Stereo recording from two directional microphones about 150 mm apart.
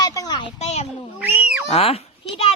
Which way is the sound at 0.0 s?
25° left (ahead or behind).